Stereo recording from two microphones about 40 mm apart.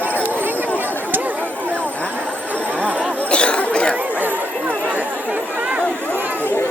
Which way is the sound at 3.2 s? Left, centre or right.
Left.